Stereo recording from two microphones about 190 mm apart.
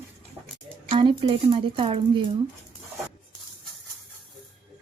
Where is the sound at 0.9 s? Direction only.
25° right (ahead or behind).